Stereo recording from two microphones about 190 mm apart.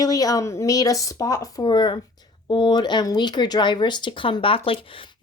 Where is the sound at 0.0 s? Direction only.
20° left (ahead or behind).